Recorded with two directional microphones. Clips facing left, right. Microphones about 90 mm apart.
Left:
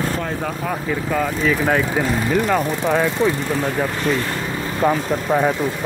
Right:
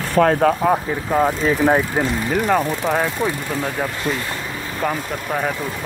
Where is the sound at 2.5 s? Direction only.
10° right (ahead or behind).